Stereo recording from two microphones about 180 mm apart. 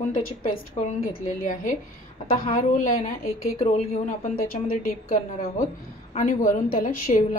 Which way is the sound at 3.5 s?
35° left (ahead or behind).